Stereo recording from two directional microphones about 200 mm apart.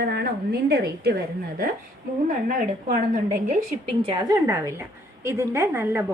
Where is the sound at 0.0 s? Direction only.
55° right (ahead or behind).